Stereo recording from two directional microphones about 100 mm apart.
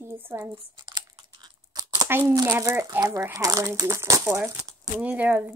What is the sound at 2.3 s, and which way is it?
Speech, 35° right (ahead or behind).